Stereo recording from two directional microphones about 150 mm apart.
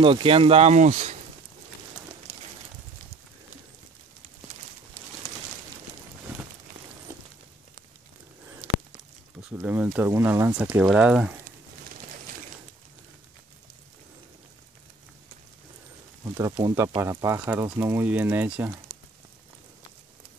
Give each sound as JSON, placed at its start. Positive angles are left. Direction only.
{"t": 0.0, "sound": "speech", "side_deg": -35}
{"t": 9.4, "sound": "speech", "side_deg": -10}
{"t": 16.3, "sound": "speech", "side_deg": -25}